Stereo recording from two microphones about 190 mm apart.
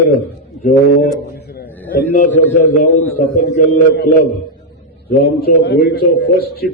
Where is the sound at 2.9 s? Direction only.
10° left (ahead or behind).